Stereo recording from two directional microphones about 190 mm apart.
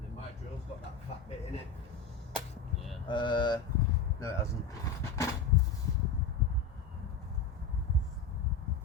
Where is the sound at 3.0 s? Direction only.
25° left (ahead or behind).